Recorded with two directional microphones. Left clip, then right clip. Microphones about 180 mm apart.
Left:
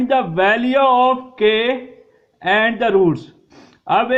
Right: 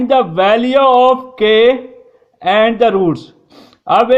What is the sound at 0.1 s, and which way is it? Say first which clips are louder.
Speech: right 5 dB; 40° right (ahead or behind).